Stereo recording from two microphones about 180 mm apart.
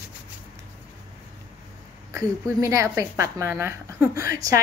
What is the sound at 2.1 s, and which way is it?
A woman's voice, 15° right (ahead or behind).